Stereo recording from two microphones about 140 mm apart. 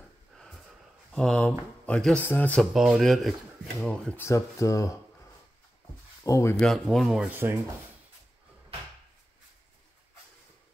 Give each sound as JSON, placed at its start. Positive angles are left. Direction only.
{"t": 0.3, "sound": "snort", "side_deg": 5}
{"t": 1.1, "sound": "speech", "side_deg": 5}
{"t": 2.7, "sound": "speech", "side_deg": 0}
{"t": 4.2, "sound": "speech", "side_deg": 20}
{"t": 6.2, "sound": "speech", "side_deg": 25}
{"t": 6.6, "sound": "speech", "side_deg": 0}